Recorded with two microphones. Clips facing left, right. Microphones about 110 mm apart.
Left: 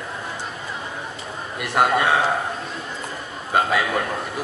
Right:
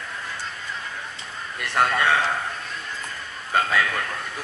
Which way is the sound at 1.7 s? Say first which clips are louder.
Left 3 dB; 15° left (ahead or behind).